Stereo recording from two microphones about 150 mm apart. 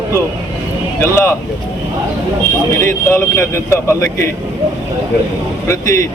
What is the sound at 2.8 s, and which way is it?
A man's voice, 15° left (ahead or behind).